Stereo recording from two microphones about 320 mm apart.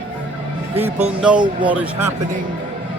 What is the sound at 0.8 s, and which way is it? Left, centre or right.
Speech, right.